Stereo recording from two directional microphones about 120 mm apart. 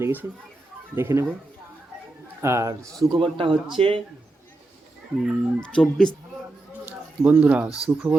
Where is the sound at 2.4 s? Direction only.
25° right (ahead or behind).